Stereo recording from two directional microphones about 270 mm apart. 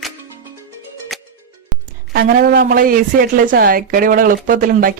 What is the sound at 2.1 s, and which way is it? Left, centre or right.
A woman's voice, right.